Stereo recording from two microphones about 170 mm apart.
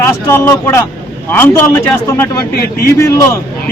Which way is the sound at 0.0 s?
15° left (ahead or behind).